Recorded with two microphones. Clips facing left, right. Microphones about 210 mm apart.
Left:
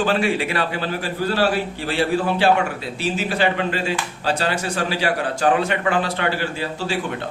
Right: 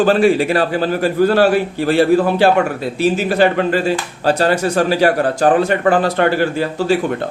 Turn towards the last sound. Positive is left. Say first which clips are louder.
# right 9 dB
turn(degrees=-45)  # may be behind; listen again after turning